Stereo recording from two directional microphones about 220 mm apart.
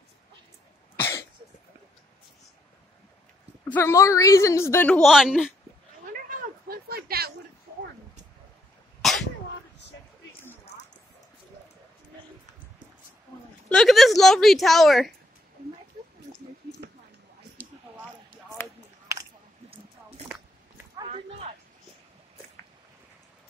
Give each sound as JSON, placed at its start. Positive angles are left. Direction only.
{"t": 0.9, "sound": "cough", "side_deg": 10}
{"t": 3.7, "sound": "a woman's voice", "side_deg": 10}
{"t": 6.0, "sound": "a sound", "side_deg": -40}
{"t": 9.0, "sound": "sneeze", "side_deg": 0}
{"t": 13.7, "sound": "a woman's voice", "side_deg": 0}
{"t": 19.1, "sound": "a sound", "side_deg": -15}
{"t": 20.2, "sound": "biting", "side_deg": -5}